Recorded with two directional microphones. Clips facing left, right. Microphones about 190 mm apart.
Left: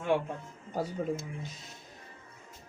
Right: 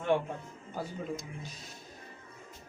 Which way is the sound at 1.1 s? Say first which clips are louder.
Left 3 dB; 25° left (ahead or behind).